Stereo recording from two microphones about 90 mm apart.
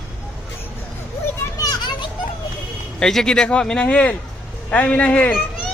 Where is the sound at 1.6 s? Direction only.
45° left (ahead or behind).